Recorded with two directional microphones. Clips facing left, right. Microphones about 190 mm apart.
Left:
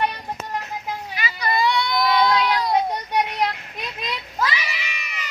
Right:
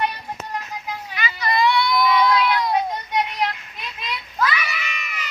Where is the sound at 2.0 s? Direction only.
35° left (ahead or behind).